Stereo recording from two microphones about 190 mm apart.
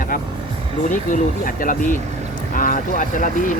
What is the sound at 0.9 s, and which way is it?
Speech, 45° left (ahead or behind).